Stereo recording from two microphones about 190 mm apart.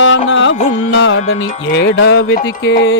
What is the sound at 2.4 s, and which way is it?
Music, 75° left (ahead or behind).